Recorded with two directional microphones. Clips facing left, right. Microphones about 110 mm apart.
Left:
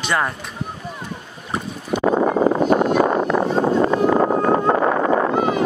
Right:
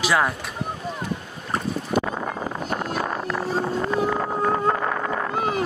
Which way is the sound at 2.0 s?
40° left (ahead or behind).